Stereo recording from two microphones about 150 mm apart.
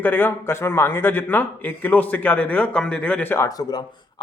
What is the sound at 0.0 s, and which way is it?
A man's voice, 10° left (ahead or behind).